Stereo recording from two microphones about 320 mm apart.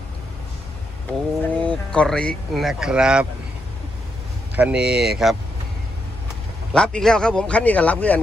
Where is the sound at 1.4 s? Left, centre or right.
Centre.